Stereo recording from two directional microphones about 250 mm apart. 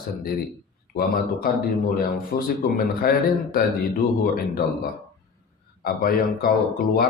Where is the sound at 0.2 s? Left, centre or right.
Left.